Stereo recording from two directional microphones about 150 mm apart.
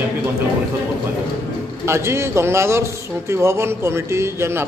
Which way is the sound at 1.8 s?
15° right (ahead or behind).